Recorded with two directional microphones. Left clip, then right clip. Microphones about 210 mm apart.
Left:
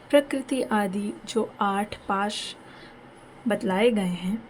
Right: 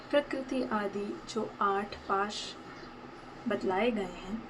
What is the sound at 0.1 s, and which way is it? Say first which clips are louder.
Speech: left 8 dB; 55° left (ahead or behind).